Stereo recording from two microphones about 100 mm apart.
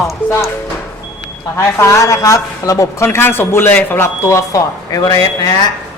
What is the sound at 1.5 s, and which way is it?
A man's voice, 30° left (ahead or behind).